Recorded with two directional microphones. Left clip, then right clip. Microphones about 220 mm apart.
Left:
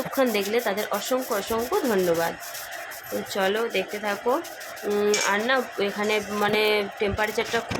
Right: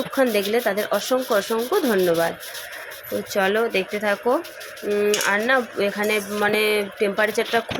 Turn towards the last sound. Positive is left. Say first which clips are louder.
# right 5 dB
turn(degrees=-20)  # may be behind; listen again after turning